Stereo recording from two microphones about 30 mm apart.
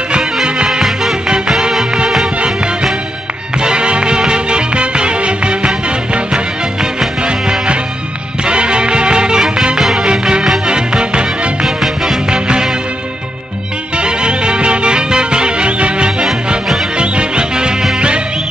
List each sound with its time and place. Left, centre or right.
3.5 s music: right
8.5 s music: right
10.7 s music: right
11.6 s music: centre
12.3 s music: right
13.9 s music: right